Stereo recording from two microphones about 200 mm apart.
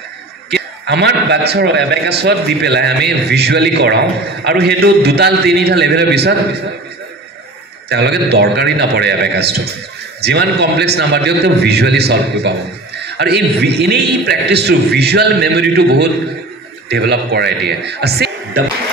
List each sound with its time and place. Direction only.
0.8 s a man's voice: 55° right (ahead or behind)
7.9 s a man's voice: 55° right (ahead or behind)